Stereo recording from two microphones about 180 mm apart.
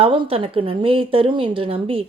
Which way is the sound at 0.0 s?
30° right (ahead or behind).